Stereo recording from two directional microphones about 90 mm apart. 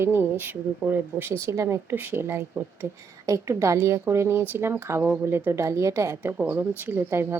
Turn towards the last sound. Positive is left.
turn(degrees=-25)  # may be behind; listen again after turning